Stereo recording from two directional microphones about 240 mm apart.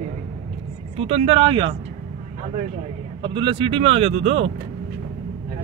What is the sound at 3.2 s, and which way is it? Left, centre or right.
Speech, centre.